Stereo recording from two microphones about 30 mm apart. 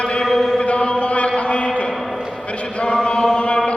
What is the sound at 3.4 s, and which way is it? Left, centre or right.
Chant, left.